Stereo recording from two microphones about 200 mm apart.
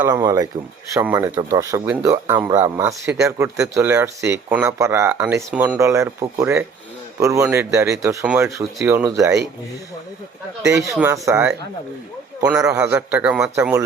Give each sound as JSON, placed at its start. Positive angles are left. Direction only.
{"t": 0.0, "sound": "speech", "side_deg": -20}
{"t": 10.9, "sound": "speech", "side_deg": -15}
{"t": 12.5, "sound": "speech", "side_deg": -15}
{"t": 12.7, "sound": "speech", "side_deg": -5}